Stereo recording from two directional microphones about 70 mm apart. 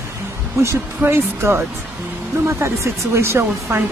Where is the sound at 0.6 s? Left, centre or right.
Right.